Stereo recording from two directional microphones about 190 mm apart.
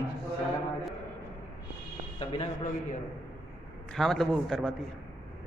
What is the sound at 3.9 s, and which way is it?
Speech, centre (ahead or behind).